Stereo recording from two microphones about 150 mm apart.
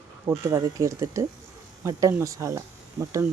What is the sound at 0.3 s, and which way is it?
Speech, 20° right (ahead or behind).